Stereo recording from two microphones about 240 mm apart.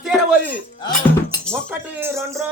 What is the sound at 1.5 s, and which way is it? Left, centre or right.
Speech, centre.